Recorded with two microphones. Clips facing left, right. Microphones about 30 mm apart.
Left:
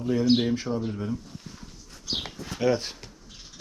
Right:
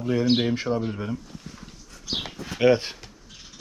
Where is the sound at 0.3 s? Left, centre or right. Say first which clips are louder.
Even; right.